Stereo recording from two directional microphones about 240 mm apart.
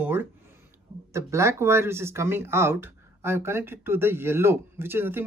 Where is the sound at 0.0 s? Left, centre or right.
Centre.